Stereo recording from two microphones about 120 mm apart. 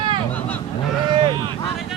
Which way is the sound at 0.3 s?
15° left (ahead or behind).